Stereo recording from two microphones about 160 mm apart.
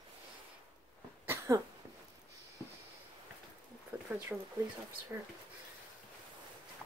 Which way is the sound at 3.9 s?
10° right (ahead or behind).